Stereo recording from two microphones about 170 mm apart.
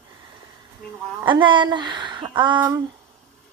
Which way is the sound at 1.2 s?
30° right (ahead or behind).